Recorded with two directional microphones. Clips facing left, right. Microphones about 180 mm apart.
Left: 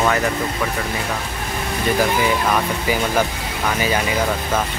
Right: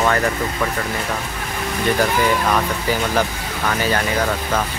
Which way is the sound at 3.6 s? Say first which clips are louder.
Even; 10° left (ahead or behind).